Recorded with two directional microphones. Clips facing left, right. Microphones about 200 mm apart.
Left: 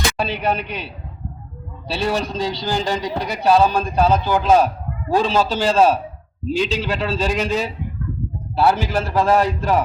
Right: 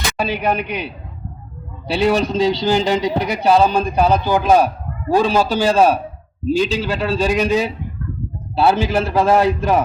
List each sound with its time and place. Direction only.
0.2 s a man's voice: 10° right (ahead or behind)
1.9 s a man's voice: 20° right (ahead or behind)